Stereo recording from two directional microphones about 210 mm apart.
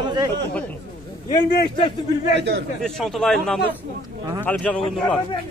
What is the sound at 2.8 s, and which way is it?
A man's voice, centre (ahead or behind).